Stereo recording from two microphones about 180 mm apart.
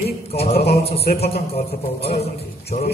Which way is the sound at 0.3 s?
35° left (ahead or behind).